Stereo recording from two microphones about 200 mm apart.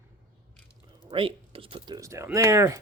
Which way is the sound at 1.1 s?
25° right (ahead or behind).